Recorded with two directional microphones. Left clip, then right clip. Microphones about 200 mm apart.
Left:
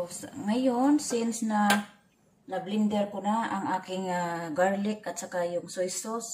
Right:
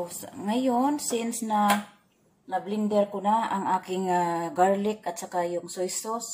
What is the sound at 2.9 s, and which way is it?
Speech, 40° right (ahead or behind).